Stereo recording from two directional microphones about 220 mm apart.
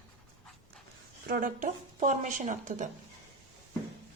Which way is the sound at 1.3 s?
35° right (ahead or behind).